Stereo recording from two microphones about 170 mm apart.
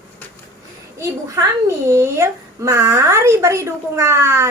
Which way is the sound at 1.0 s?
15° right (ahead or behind).